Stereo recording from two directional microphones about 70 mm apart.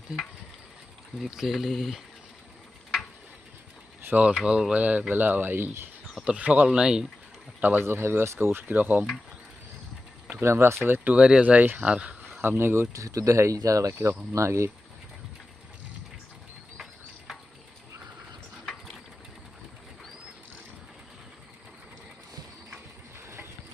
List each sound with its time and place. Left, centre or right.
1.2 s speech: centre
4.1 s speech: centre
4.4 s speech: centre; by 5.9 s right
6.2 s speech: centre
7.6 s speech: right
10.4 s speech: right
10.8 s speech: right
12.4 s speech: right
12.9 s speech: right